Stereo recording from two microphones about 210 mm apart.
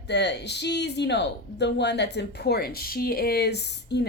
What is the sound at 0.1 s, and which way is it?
Speech, 55° left (ahead or behind).